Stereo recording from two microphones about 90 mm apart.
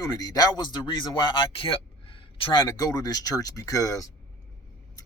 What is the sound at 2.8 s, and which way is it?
Speech, 45° left (ahead or behind).